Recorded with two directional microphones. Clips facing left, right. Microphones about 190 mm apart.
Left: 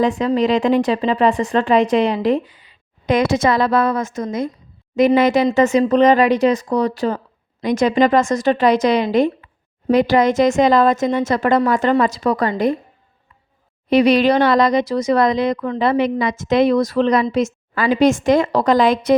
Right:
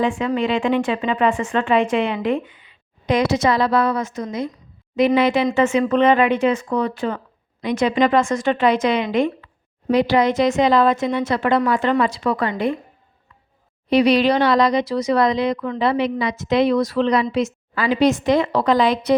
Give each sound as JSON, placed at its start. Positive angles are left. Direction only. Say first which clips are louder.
{"t": 0.0, "sound": "speech", "louder": "left 4 dB", "side_deg": 40}
{"t": 13.9, "sound": "speech", "louder": "left 2 dB", "side_deg": 50}